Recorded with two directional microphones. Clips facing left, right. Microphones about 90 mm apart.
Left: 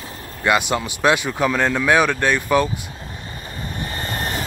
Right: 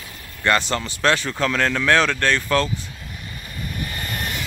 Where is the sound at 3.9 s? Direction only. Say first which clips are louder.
Left 3 dB; 35° left (ahead or behind).